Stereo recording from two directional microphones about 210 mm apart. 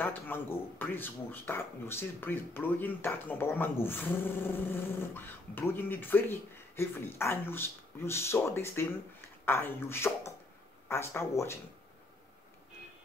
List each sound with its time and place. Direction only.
0.0 s speech: 10° left (ahead or behind)